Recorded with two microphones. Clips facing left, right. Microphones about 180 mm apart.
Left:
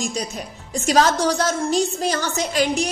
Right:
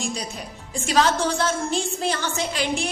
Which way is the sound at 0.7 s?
40° left (ahead or behind).